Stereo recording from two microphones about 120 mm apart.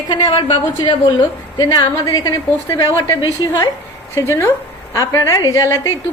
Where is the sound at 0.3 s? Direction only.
55° left (ahead or behind).